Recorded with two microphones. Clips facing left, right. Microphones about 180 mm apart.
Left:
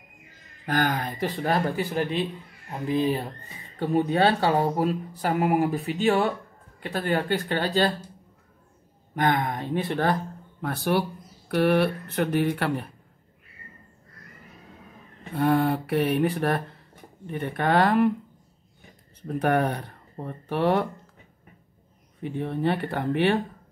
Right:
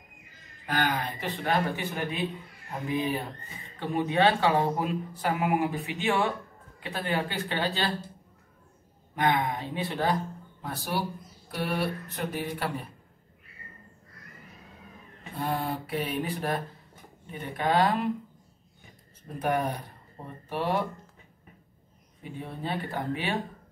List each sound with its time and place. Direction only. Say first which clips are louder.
0.7 s speech: left 3 dB; 45° left (ahead or behind)
3.8 s speech: left 3 dB; 40° left (ahead or behind)
6.8 s speech: left 4 dB; 45° left (ahead or behind)
9.1 s speech: left 2 dB; 45° left (ahead or behind)
10.6 s mantra: left 7 dB; 65° left (ahead or behind)
11.5 s speech: left 9 dB; 70° left (ahead or behind)
15.3 s mantra: left 9 dB; 65° left (ahead or behind)
19.2 s mantra: left 5 dB; 65° left (ahead or behind)
22.2 s mantra: left 10 dB; 65° left (ahead or behind)